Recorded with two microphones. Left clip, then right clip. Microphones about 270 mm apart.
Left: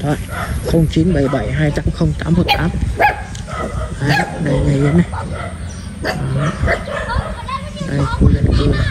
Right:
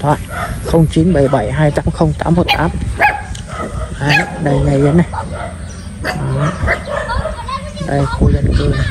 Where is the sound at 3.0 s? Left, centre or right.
Right.